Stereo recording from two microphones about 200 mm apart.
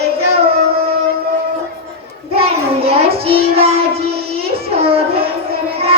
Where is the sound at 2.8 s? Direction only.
30° right (ahead or behind).